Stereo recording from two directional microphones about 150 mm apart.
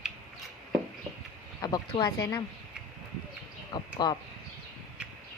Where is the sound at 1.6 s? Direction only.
25° left (ahead or behind).